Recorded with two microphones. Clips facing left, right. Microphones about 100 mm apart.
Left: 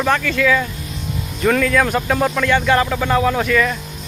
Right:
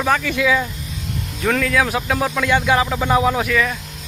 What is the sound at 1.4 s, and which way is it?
Speech, centre (ahead or behind).